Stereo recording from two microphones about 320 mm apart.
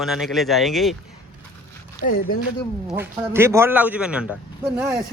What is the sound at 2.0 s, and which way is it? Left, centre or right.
Speech, left.